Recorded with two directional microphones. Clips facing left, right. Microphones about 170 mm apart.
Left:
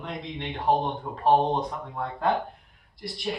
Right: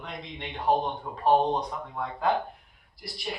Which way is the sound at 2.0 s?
Centre (ahead or behind).